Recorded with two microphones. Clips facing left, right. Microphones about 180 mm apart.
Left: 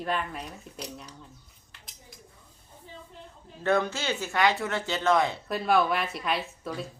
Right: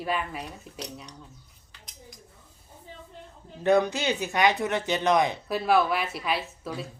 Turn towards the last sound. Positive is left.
turn(degrees=0)  # may be behind; listen again after turning